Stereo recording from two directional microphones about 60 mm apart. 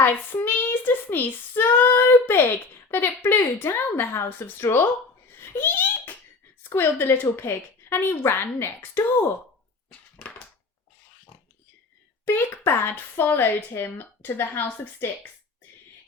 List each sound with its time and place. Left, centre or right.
0.0 s speech: left
5.3 s giggle: left
6.7 s speech: left
10.2 s a sound: left
12.2 s speech: left